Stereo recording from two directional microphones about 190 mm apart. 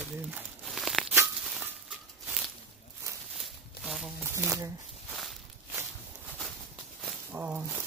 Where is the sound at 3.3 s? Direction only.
Centre (ahead or behind).